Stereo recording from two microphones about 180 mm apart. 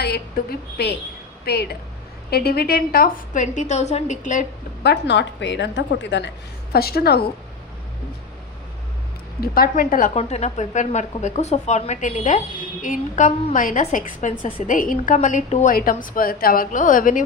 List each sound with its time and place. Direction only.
0.0 s a woman's voice: 65° left (ahead or behind); by 4.4 s 45° left (ahead or behind)
4.8 s a woman's voice: 70° left (ahead or behind)
6.7 s a woman's voice: 60° left (ahead or behind)
9.4 s a woman's voice: 55° left (ahead or behind)
15.7 s a woman's voice: 50° left (ahead or behind)